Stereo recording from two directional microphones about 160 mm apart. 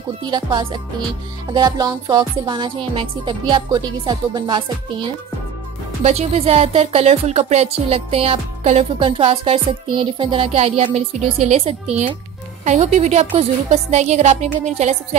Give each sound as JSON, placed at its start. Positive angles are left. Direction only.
{"t": 0.3, "sound": "music", "side_deg": -30}
{"t": 6.0, "sound": "a woman's voice", "side_deg": -40}